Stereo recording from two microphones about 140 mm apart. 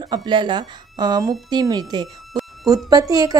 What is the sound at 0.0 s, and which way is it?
A woman's voice, 30° right (ahead or behind).